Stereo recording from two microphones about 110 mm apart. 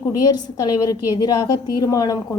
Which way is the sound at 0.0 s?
35° left (ahead or behind).